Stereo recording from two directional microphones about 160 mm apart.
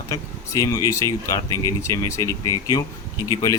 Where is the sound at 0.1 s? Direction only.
20° left (ahead or behind).